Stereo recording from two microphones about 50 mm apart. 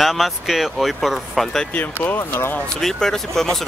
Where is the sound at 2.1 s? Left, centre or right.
Left.